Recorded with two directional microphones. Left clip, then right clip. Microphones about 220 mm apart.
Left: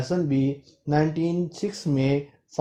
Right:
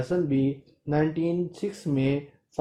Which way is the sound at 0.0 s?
30° left (ahead or behind).